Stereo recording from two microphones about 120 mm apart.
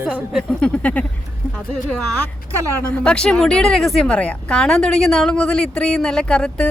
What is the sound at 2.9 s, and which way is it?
Speech, 10° left (ahead or behind).